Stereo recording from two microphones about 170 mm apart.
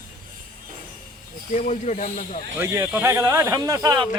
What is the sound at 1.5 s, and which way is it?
Speech, 45° left (ahead or behind).